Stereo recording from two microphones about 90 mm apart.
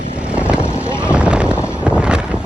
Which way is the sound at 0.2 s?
15° right (ahead or behind).